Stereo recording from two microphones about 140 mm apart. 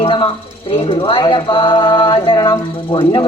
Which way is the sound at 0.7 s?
40° left (ahead or behind).